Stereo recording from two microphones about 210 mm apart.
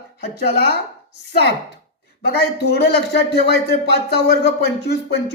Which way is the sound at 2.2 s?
50° left (ahead or behind).